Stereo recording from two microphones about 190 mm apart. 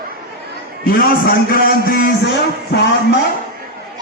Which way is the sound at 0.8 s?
50° left (ahead or behind).